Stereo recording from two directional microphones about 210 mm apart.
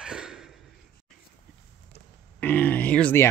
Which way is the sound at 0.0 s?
5° right (ahead or behind).